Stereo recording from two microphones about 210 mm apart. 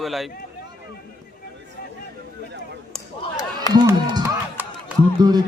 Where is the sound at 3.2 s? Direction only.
20° left (ahead or behind).